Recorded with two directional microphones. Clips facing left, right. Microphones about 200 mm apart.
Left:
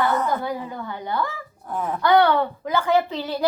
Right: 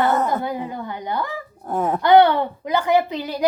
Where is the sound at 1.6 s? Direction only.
40° right (ahead or behind).